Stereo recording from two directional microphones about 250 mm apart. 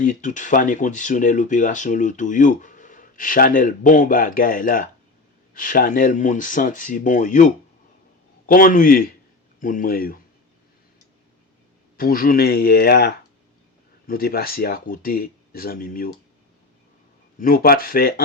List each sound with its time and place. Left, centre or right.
0.0 s speech: left
11.9 s speech: left
17.4 s speech: left